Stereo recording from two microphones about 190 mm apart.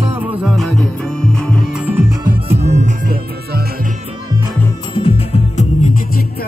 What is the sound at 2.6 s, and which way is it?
Music, 35° right (ahead or behind).